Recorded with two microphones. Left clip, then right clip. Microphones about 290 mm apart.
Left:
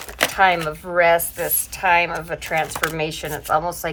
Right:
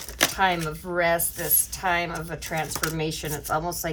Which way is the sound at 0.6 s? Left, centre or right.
Centre.